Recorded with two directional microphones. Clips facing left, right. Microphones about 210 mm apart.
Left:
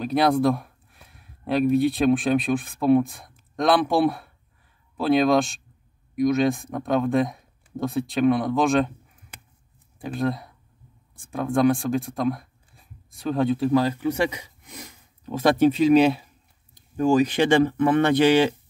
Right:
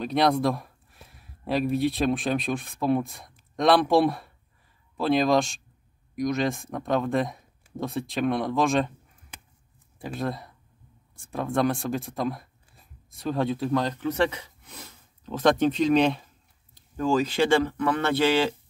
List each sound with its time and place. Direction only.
0.0 s speech: centre (ahead or behind)
9.9 s speech: centre (ahead or behind); by 18.5 s 15° left (ahead or behind)